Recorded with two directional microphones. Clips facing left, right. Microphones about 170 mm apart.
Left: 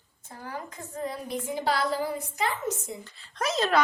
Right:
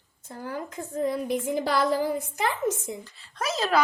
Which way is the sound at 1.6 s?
50° right (ahead or behind).